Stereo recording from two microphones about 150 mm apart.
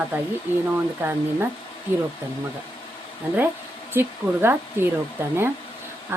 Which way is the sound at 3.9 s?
15° right (ahead or behind).